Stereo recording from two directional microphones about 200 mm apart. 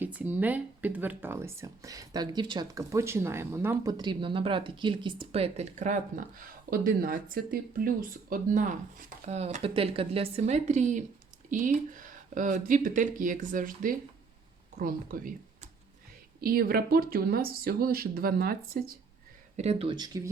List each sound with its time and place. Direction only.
0.0 s speech: 10° right (ahead or behind); by 15.3 s 45° right (ahead or behind)
16.4 s speech: 50° right (ahead or behind)
19.5 s speech: 30° right (ahead or behind)